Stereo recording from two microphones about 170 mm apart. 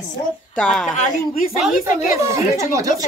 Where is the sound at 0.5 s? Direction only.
5° left (ahead or behind).